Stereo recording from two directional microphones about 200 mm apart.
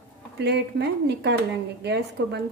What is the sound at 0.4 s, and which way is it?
A woman's voice, 55° right (ahead or behind).